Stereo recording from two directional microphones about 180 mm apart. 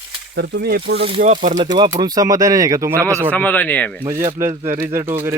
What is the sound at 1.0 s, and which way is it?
Speech, 30° right (ahead or behind).